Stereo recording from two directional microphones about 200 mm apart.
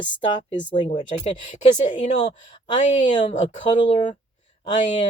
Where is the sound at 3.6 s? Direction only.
25° left (ahead or behind).